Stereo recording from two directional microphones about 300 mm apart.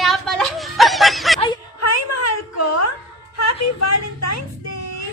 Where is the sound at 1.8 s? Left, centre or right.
Left.